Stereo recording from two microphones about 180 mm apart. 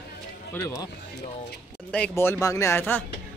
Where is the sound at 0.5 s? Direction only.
20° left (ahead or behind).